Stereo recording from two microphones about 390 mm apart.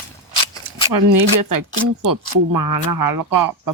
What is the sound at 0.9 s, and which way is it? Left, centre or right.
Speech, right.